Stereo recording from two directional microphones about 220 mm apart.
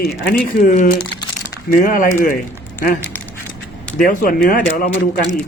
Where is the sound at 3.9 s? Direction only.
40° left (ahead or behind).